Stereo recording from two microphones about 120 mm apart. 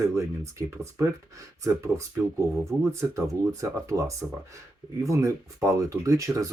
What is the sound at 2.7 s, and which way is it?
Speech, 10° right (ahead or behind).